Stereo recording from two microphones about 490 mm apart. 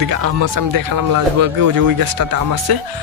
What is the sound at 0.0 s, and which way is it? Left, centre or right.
Speech, right.